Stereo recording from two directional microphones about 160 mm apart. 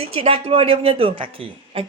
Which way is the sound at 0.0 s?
35° right (ahead or behind).